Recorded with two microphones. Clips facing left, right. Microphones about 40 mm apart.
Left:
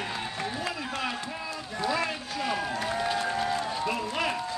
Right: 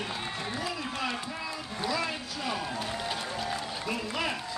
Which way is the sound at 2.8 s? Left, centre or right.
Left.